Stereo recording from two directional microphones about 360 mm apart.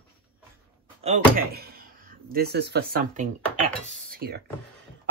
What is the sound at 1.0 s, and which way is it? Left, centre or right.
Speech, right.